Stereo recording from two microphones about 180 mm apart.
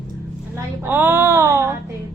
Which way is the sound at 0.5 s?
10° right (ahead or behind).